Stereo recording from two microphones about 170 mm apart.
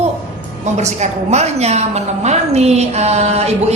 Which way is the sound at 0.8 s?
40° right (ahead or behind).